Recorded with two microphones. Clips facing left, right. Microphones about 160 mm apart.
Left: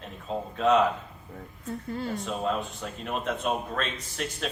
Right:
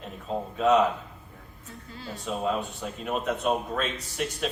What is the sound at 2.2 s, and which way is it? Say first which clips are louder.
Speech: right 5 dB; centre (ahead or behind).